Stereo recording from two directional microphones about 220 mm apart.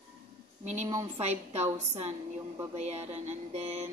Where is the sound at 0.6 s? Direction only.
30° right (ahead or behind).